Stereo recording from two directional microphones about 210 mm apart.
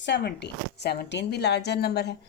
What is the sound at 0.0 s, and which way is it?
Speech, 55° left (ahead or behind).